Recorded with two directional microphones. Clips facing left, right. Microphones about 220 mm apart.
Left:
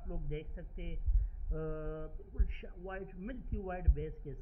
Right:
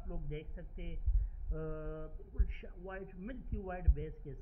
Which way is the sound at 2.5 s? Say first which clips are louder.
Left 3 dB; 25° left (ahead or behind).